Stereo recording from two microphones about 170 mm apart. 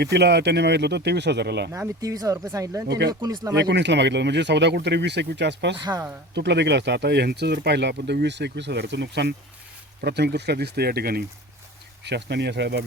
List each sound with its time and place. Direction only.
0.0 s speech: 75° right (ahead or behind)
1.7 s speech: 20° right (ahead or behind)
2.8 s speech: 75° right (ahead or behind)
3.1 s speech: 20° right (ahead or behind)
3.6 s speech: 90° right
5.8 s speech: 25° right (ahead or behind)
6.3 s speech: 90° right
10.0 s speech: 75° right (ahead or behind)
12.0 s speech: 85° right